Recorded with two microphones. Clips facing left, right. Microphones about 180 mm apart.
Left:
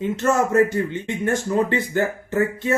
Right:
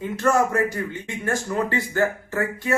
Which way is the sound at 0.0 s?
25° left (ahead or behind).